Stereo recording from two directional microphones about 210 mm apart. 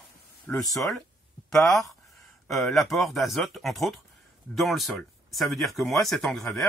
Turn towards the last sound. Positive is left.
turn(degrees=0)  # may be behind; listen again after turning